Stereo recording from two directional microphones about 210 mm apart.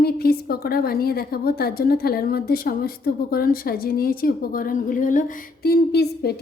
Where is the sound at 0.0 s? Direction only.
45° left (ahead or behind).